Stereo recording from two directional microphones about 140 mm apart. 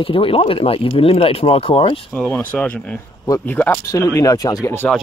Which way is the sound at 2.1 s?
5° left (ahead or behind).